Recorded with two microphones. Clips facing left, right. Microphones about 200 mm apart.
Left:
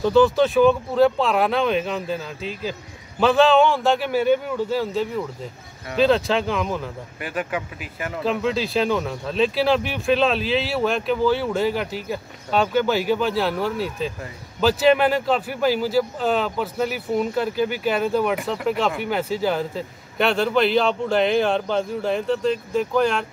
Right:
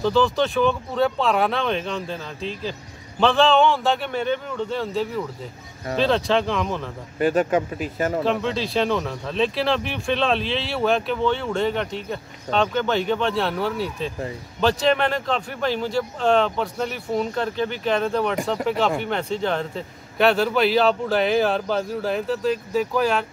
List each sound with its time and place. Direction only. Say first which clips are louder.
0.0 s speech: left 4 dB; centre (ahead or behind)
7.2 s speech: right 9 dB; 40° right (ahead or behind)
8.2 s speech: left 5 dB; 5° left (ahead or behind)